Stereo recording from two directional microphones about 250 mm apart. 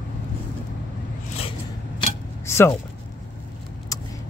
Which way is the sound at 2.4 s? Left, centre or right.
Centre.